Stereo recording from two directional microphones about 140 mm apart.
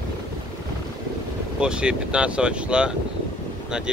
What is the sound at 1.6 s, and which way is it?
Speech, 5° right (ahead or behind).